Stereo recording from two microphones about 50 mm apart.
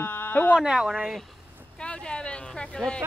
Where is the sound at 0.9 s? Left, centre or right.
Centre.